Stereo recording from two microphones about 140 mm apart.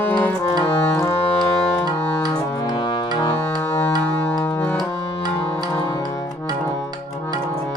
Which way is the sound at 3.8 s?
10° left (ahead or behind).